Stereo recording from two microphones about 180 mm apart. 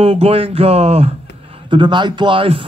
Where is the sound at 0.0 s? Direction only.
35° right (ahead or behind).